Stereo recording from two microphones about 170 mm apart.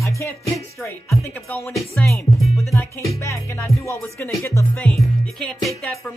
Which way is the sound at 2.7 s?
15° left (ahead or behind).